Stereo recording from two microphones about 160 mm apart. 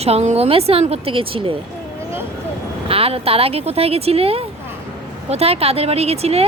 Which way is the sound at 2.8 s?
35° right (ahead or behind).